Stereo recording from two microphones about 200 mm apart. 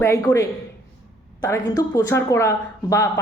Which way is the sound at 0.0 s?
15° left (ahead or behind).